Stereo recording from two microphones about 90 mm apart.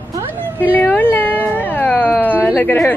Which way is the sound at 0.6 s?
20° left (ahead or behind).